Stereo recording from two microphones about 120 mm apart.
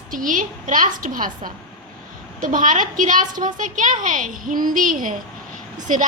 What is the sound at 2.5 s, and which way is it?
Speech, 90° right.